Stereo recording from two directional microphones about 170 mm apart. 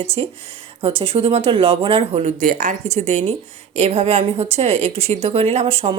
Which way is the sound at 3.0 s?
40° right (ahead or behind).